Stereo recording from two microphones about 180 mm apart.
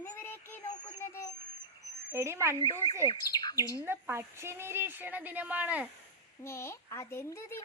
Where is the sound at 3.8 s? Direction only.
15° right (ahead or behind).